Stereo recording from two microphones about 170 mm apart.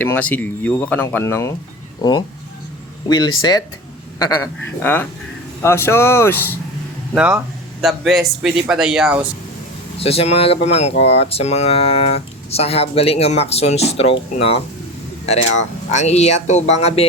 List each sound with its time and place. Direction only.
0.0 s speech: 10° left (ahead or behind)
2.0 s speech: 25° left (ahead or behind)
4.8 s speech: 10° left (ahead or behind)
7.1 s speech: 5° right (ahead or behind)
10.0 s speech: 35° left (ahead or behind)
15.9 s speech: 40° left (ahead or behind)